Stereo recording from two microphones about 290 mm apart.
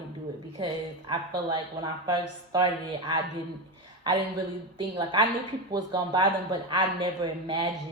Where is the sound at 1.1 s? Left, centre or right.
Centre.